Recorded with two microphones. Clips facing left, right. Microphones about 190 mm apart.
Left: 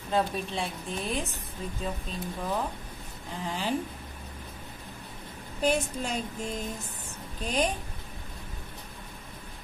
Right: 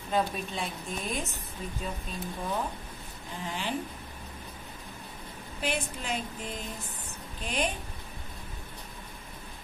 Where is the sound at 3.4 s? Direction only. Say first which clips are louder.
Left 3 dB; 40° left (ahead or behind).